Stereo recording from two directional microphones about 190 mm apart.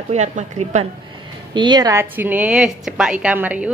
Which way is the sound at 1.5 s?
25° right (ahead or behind).